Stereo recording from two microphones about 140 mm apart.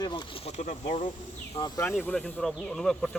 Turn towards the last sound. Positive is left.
turn(degrees=5)  # may be behind; listen again after turning